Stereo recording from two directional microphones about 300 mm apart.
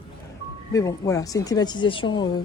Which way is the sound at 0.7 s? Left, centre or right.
Centre.